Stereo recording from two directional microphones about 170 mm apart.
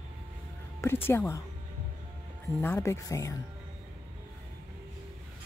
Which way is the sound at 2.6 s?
15° left (ahead or behind).